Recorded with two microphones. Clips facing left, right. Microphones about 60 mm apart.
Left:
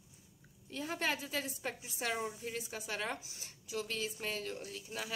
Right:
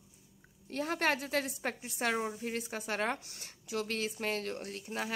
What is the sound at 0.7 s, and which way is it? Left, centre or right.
A woman's voice, right.